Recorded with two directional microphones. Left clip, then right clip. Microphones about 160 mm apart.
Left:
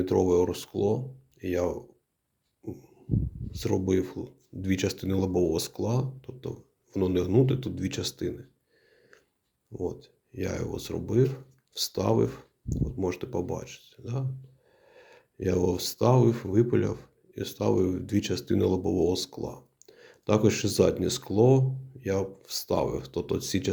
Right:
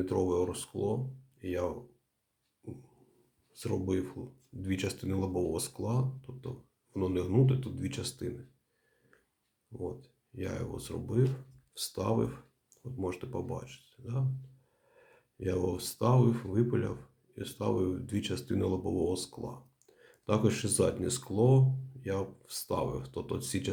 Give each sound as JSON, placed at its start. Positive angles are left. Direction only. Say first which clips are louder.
{"t": 0.0, "sound": "speech", "louder": "left 7 dB", "side_deg": 35}
{"t": 3.5, "sound": "speech", "louder": "left 7 dB", "side_deg": 35}
{"t": 9.7, "sound": "speech", "louder": "left 6 dB", "side_deg": 35}